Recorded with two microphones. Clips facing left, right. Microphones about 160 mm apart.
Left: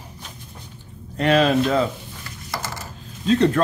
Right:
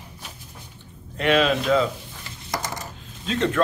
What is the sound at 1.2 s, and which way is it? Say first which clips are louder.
Speech: left 3 dB; 40° left (ahead or behind).